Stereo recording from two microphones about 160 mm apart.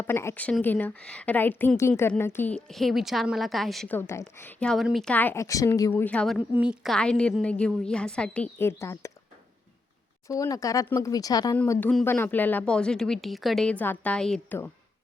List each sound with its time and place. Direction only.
0.0 s a woman's voice: 15° left (ahead or behind)
3.9 s a woman's voice: 15° left (ahead or behind)
5.9 s a woman's voice: 10° left (ahead or behind)
10.2 s speech: 20° left (ahead or behind)
11.5 s a woman's voice: 10° left (ahead or behind)